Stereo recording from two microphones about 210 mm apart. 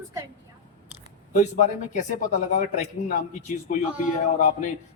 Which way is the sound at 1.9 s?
35° left (ahead or behind).